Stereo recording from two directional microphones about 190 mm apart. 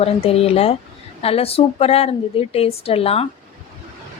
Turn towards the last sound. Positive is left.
turn(degrees=30)  # may be behind; listen again after turning